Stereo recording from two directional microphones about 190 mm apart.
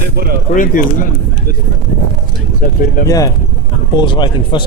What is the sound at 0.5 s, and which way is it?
Speech, 45° left (ahead or behind).